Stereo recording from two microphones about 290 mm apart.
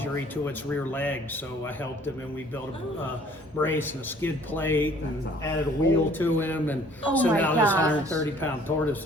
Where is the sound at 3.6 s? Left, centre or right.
Centre.